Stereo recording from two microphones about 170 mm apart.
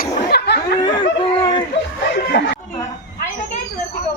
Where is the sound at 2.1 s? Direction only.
80° left.